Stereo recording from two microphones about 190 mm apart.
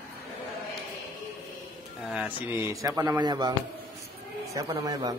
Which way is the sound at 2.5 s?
15° right (ahead or behind).